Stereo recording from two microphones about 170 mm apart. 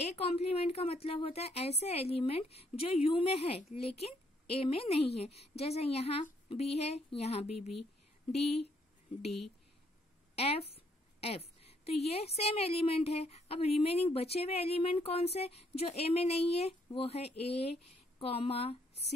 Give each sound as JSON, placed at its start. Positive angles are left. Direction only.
{"t": 0.1, "sound": "a woman's voice", "side_deg": 35}
{"t": 10.3, "sound": "a woman's voice", "side_deg": 35}